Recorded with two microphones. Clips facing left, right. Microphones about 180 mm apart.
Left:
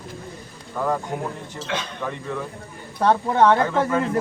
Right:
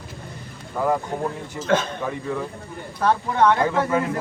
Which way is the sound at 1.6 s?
50° right (ahead or behind).